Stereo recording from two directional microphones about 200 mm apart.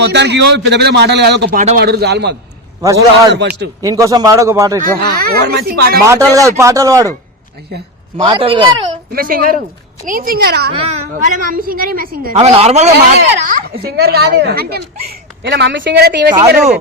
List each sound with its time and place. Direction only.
0.0 s a woman's voice: 60° right (ahead or behind)
1.5 s speech: 40° right (ahead or behind)
1.8 s a woman's voice: 55° right (ahead or behind)
2.8 s speech: 15° right (ahead or behind)
4.9 s a woman's voice: 50° right (ahead or behind)
6.1 s speech: 15° right (ahead or behind)
8.2 s speech: 25° right (ahead or behind)
9.1 s a woman's voice: 45° right (ahead or behind)
10.8 s speech: 30° right (ahead or behind)
11.3 s a woman's voice: 45° right (ahead or behind)
12.4 s speech: 30° right (ahead or behind)
13.8 s a woman's voice: 55° right (ahead or behind)